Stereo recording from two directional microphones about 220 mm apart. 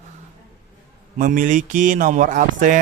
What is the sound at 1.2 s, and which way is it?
Speech, 40° right (ahead or behind).